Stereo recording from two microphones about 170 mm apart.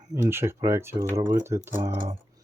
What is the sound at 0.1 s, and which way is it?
Speech, 15° right (ahead or behind).